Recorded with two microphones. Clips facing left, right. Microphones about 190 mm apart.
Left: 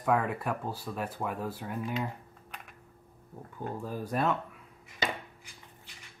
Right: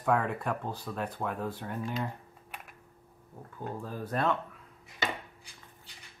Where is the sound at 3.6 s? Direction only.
10° left (ahead or behind).